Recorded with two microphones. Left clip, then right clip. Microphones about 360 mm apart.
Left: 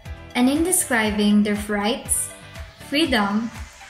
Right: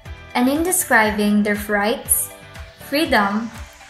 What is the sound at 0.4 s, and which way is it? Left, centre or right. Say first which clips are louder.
Speech: right 1 dB; centre.